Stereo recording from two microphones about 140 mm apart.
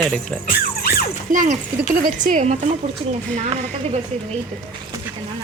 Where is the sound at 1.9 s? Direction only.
90° right; by 4.0 s 50° right (ahead or behind).